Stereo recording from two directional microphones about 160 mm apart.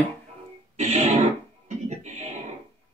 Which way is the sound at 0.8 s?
45° right (ahead or behind).